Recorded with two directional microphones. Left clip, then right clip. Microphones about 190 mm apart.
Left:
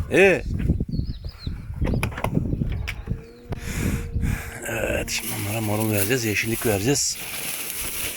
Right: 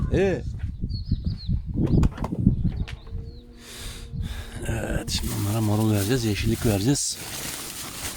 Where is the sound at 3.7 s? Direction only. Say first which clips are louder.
Left 9 dB; 30° right (ahead or behind).